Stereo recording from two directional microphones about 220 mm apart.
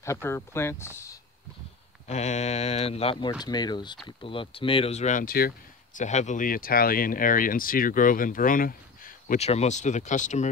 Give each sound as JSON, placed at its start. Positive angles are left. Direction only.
{"t": 0.0, "sound": "speech", "side_deg": 10}
{"t": 2.0, "sound": "speech", "side_deg": 30}